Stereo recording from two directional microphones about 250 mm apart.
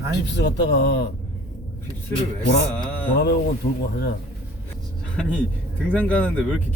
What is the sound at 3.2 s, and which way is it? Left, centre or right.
Speech, left.